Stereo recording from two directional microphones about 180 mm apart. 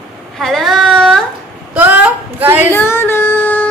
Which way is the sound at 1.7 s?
10° right (ahead or behind).